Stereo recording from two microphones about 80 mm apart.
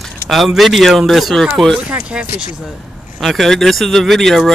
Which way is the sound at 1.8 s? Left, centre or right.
Centre.